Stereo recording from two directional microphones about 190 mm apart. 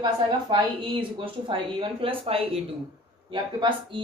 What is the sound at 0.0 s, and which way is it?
Speech, 25° right (ahead or behind).